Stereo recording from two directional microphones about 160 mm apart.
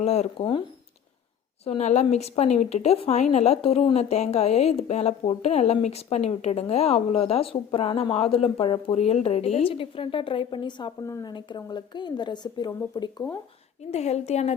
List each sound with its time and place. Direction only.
0.0 s a woman's voice: 40° left (ahead or behind)
1.6 s a woman's voice: 45° left (ahead or behind); by 13.2 s 25° left (ahead or behind)
13.9 s a woman's voice: 45° left (ahead or behind)